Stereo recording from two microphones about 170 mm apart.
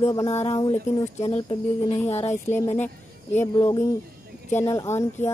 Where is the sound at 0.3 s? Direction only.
40° left (ahead or behind).